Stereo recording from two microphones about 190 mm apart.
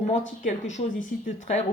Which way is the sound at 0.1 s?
40° left (ahead or behind).